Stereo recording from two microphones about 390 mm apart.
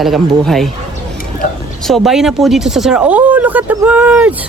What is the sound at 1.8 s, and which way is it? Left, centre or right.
Speech, centre.